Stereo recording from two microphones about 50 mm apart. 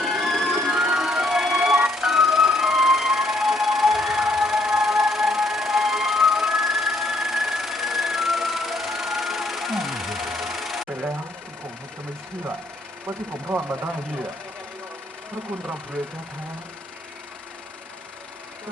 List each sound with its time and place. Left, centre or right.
0.0 s music: centre
13.5 s speech: right